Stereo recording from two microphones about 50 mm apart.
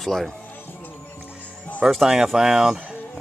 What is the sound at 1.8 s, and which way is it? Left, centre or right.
Speech, centre.